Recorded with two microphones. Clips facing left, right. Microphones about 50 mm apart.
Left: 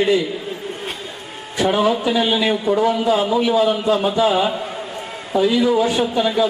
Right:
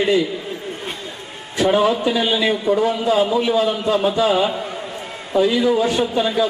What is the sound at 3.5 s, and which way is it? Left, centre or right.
A man's voice, centre.